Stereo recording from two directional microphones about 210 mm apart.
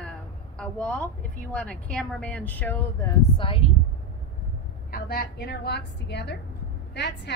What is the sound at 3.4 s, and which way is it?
Speech, 25° left (ahead or behind).